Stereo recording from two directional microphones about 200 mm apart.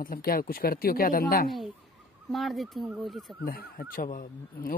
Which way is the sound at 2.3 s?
Centre (ahead or behind).